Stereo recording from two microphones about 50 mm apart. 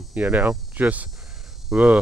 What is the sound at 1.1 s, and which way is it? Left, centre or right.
Cricket, centre.